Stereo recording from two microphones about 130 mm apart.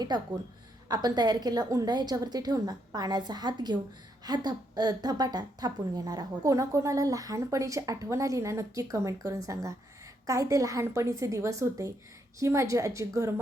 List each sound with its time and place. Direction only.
0.1 s a woman's voice: 30° right (ahead or behind)